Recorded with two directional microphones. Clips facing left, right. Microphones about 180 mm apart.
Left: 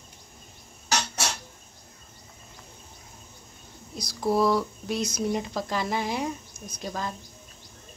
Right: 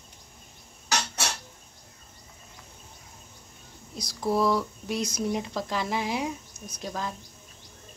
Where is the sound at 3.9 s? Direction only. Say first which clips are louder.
Left 2 dB; centre (ahead or behind).